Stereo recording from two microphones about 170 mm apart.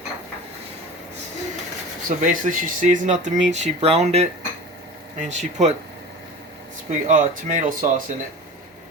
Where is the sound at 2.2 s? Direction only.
50° right (ahead or behind).